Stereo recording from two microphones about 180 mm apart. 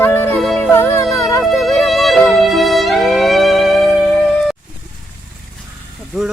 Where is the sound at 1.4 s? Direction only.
Centre (ahead or behind).